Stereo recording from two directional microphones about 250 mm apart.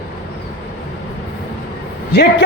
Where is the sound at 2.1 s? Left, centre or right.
Left.